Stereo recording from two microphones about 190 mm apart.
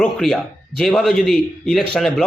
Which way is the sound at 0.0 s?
Centre (ahead or behind).